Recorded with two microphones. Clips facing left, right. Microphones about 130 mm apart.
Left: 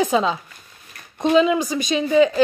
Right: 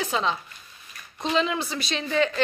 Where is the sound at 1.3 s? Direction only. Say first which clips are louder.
Left 8 dB; 15° left (ahead or behind).